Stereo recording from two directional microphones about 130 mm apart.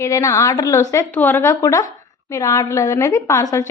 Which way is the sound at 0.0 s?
25° left (ahead or behind).